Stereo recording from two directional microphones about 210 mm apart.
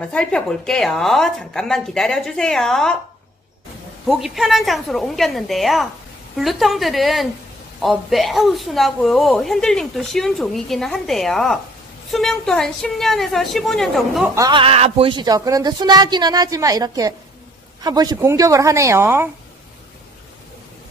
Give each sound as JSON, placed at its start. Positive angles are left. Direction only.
{"t": 0.1, "sound": "a woman's voice", "side_deg": 5}
{"t": 4.1, "sound": "a woman's voice", "side_deg": 0}
{"t": 14.3, "sound": "speech", "side_deg": -20}